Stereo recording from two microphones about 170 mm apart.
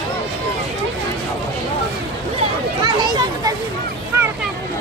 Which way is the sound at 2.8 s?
25° right (ahead or behind).